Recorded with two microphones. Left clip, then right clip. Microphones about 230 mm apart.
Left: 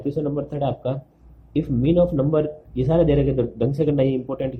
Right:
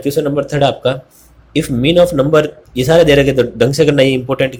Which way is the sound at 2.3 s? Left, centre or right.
Right.